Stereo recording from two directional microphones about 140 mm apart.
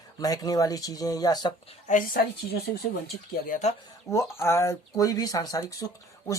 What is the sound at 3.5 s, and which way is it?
Speech, 55° left (ahead or behind).